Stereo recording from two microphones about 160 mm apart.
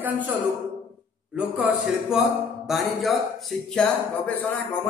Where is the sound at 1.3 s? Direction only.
5° right (ahead or behind).